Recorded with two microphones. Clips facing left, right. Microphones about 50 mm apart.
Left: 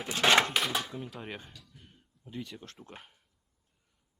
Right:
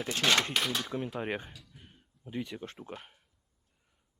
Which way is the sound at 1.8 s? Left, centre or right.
Right.